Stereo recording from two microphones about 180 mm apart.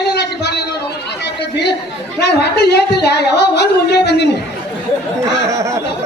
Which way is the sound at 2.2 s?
65° left (ahead or behind).